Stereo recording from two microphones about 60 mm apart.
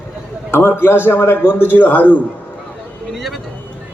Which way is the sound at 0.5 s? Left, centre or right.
Left.